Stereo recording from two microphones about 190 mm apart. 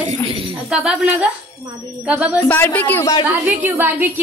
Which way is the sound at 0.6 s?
5° right (ahead or behind).